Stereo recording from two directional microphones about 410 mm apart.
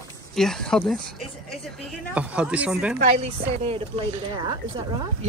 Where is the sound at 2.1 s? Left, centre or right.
Centre.